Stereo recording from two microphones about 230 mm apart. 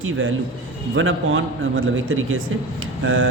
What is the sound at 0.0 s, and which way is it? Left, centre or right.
A man's voice, right.